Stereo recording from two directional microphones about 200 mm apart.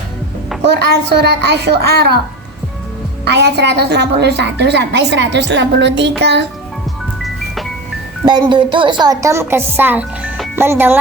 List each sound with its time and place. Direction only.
0.6 s a woman's voice: 55° right (ahead or behind)
3.2 s a woman's voice: 55° right (ahead or behind)
8.2 s a woman's voice: 20° right (ahead or behind)